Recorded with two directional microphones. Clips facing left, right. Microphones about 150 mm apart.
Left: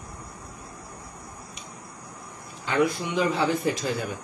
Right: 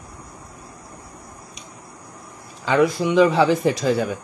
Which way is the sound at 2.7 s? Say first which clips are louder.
Right 6 dB; 90° right.